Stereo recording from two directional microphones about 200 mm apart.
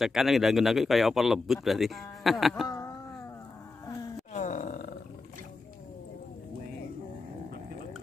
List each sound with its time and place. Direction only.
0.0 s speech: centre (ahead or behind)
2.7 s a sound: 15° left (ahead or behind)
4.3 s roar: 40° left (ahead or behind)